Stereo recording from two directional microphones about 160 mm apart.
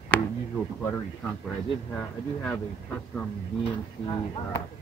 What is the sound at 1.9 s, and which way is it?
Speech, 10° left (ahead or behind).